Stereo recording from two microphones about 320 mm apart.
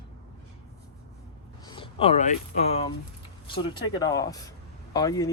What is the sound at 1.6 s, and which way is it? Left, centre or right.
Speech, centre.